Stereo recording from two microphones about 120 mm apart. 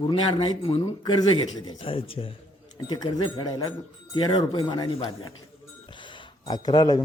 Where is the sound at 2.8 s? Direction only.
35° left (ahead or behind).